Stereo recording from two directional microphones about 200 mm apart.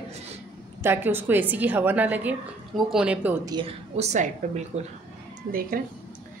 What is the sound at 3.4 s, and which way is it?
Speech, 25° right (ahead or behind).